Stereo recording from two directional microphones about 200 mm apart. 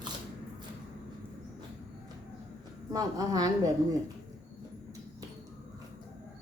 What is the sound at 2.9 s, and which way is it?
Speech, 20° right (ahead or behind).